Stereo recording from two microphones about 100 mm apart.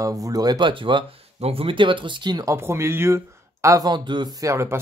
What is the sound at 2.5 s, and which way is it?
Speech, 25° right (ahead or behind).